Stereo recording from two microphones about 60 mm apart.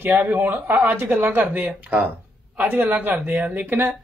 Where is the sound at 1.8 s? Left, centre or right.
Right.